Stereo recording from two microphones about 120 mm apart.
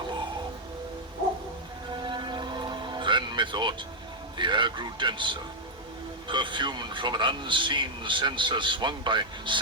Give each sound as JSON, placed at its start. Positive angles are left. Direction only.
{"t": 1.9, "sound": "music", "side_deg": -40}
{"t": 4.4, "sound": "a man's voice", "side_deg": -40}